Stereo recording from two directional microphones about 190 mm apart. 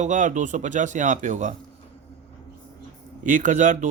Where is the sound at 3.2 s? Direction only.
40° right (ahead or behind).